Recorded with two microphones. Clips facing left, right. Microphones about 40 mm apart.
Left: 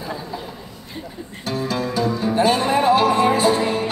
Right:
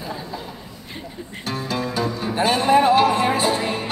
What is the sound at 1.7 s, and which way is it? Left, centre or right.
Music, right.